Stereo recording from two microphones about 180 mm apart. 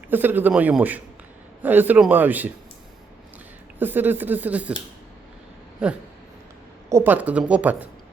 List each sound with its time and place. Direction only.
0.1 s speech: 10° right (ahead or behind)
3.8 s speech: 10° right (ahead or behind)
6.9 s speech: 10° right (ahead or behind)